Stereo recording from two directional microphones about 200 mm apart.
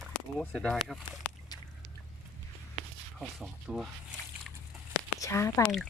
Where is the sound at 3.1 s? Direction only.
5° right (ahead or behind).